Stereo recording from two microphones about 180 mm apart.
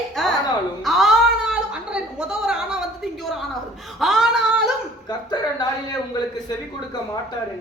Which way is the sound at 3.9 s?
Centre (ahead or behind).